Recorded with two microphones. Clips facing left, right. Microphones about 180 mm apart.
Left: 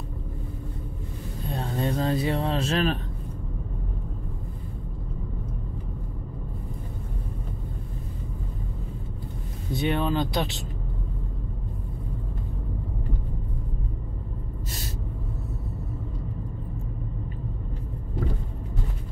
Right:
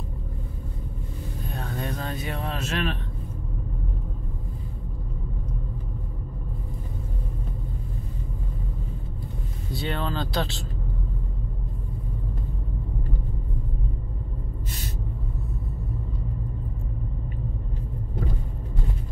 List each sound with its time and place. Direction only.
1.5 s vehicle: 30° left (ahead or behind)
9.8 s speech: 15° left (ahead or behind)